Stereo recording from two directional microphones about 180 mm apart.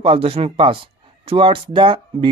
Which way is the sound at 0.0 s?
30° right (ahead or behind).